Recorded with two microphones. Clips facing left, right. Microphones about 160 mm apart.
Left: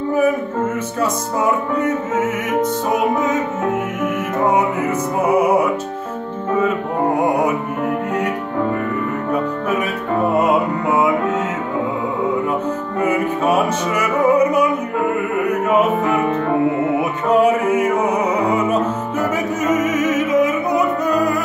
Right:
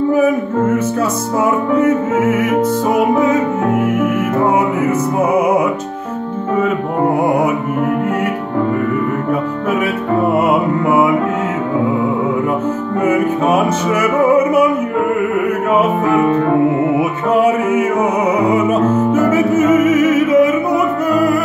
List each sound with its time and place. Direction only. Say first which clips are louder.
17.4 s music: right 2 dB; 10° right (ahead or behind)
19.7 s opera: right 3 dB; centre (ahead or behind)